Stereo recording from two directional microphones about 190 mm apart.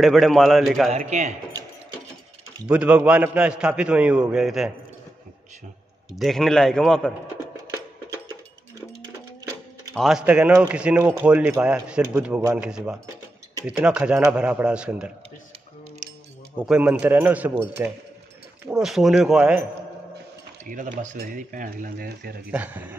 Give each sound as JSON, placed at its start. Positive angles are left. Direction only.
{"t": 0.0, "sound": "a man's voice", "side_deg": 0}
{"t": 0.9, "sound": "speech", "side_deg": -35}
{"t": 2.7, "sound": "a man's voice", "side_deg": -5}
{"t": 6.1, "sound": "a man's voice", "side_deg": 0}
{"t": 9.9, "sound": "a man's voice", "side_deg": 0}
{"t": 16.5, "sound": "a man's voice", "side_deg": -5}
{"t": 20.6, "sound": "speech", "side_deg": -45}
{"t": 22.5, "sound": "speech", "side_deg": -10}